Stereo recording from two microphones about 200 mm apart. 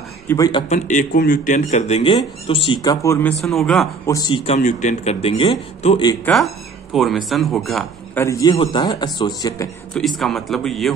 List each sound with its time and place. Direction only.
0.3 s a man's voice: 20° left (ahead or behind)
0.7 s speech: 40° left (ahead or behind); by 3.9 s centre (ahead or behind)
4.0 s speech: 15° left (ahead or behind)
4.5 s speech: 40° left (ahead or behind)
6.2 s speech: centre (ahead or behind)
8.2 s a man's voice: 15° left (ahead or behind)
9.9 s speech: centre (ahead or behind)